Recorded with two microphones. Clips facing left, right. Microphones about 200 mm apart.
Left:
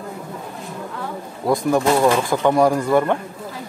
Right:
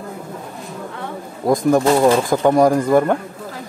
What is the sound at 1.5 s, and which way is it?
Speech, 45° right (ahead or behind).